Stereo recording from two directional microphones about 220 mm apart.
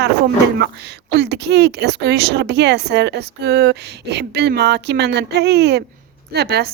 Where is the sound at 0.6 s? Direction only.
50° right (ahead or behind).